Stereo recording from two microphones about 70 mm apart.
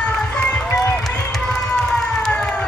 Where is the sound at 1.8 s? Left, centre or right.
Centre.